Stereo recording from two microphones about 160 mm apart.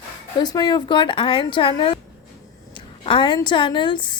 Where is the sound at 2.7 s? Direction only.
30° left (ahead or behind).